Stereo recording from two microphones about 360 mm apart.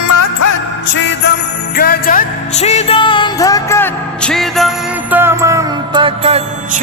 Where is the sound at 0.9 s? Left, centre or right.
Left.